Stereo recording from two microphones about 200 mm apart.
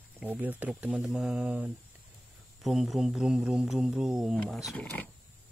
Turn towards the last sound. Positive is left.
turn(degrees=10)  # may be behind; listen again after turning